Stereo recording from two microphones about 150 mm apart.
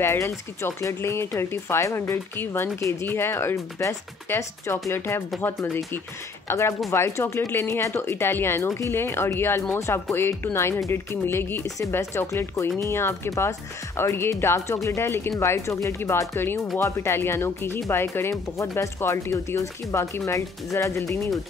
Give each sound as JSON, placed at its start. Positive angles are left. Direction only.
{"t": 0.0, "sound": "speech", "side_deg": 15}
{"t": 6.4, "sound": "speech", "side_deg": 15}